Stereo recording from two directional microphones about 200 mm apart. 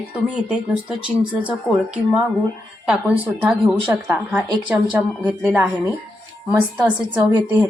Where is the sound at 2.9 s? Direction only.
5° right (ahead or behind).